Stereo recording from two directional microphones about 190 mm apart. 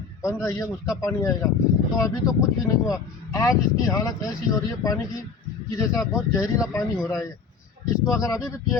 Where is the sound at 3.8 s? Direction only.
20° left (ahead or behind).